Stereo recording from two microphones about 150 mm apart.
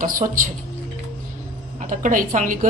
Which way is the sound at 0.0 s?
60° right (ahead or behind).